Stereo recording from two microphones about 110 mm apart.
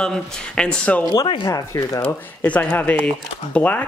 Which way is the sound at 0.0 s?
5° left (ahead or behind).